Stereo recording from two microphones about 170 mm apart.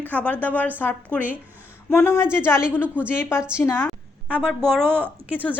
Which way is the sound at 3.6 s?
10° left (ahead or behind).